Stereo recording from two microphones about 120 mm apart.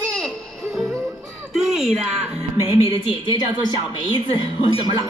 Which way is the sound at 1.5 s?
5° right (ahead or behind).